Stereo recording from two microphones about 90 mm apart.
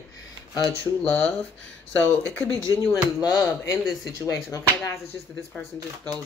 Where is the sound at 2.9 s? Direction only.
35° left (ahead or behind).